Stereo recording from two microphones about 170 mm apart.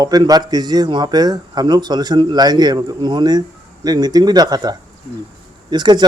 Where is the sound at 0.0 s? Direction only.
20° right (ahead or behind).